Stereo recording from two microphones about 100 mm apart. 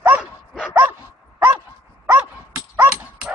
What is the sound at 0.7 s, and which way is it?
Dog, 20° right (ahead or behind).